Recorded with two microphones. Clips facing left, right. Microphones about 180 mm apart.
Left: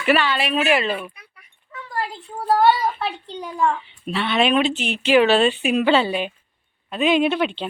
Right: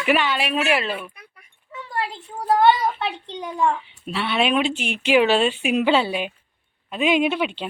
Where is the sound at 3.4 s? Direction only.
20° right (ahead or behind).